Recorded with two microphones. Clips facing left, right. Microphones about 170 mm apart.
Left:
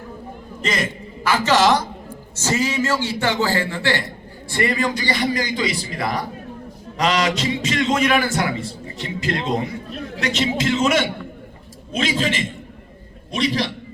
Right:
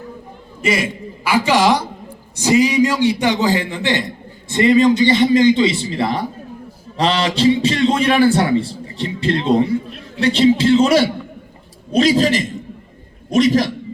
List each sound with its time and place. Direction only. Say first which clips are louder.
0.6 s a man's voice: right 5 dB; 10° right (ahead or behind); by 13.7 s 45° right (ahead or behind)